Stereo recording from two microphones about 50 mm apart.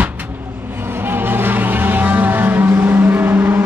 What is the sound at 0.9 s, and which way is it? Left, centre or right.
Vehicle, right.